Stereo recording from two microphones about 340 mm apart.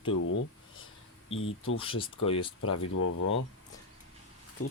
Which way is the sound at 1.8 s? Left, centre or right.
Centre.